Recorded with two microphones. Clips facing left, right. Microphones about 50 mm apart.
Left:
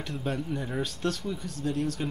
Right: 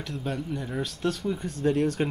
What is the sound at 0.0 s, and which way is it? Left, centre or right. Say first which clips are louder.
Speech: even; centre.